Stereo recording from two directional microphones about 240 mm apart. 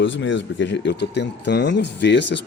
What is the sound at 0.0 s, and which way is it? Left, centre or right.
Speech, left.